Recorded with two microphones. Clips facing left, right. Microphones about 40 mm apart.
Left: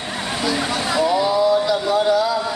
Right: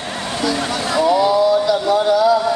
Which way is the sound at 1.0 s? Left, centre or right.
Centre.